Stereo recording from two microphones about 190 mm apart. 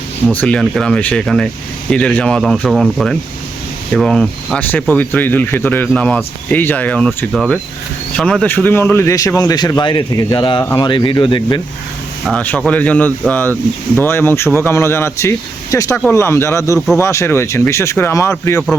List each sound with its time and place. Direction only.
0.3 s speech: 5° left (ahead or behind)
7.3 s speech: 5° right (ahead or behind); by 11.6 s 25° left (ahead or behind)
12.2 s speech: 5° left (ahead or behind)